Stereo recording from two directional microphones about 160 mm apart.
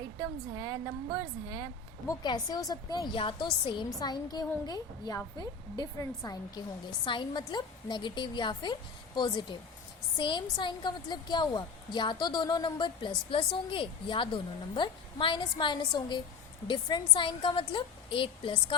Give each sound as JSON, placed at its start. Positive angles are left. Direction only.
{"t": 0.2, "sound": "a woman's voice", "side_deg": -25}
{"t": 2.0, "sound": "a woman's voice", "side_deg": 25}